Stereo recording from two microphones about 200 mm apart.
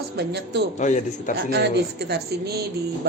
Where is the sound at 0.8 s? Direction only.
35° left (ahead or behind).